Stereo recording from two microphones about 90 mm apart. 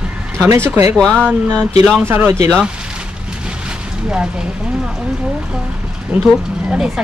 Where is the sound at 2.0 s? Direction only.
25° right (ahead or behind).